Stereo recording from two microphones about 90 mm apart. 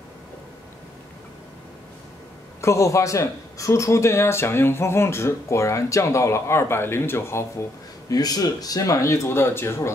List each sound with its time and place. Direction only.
2.6 s a man's voice: 35° left (ahead or behind)
8.1 s a man's voice: 45° left (ahead or behind); by 9.8 s 25° left (ahead or behind)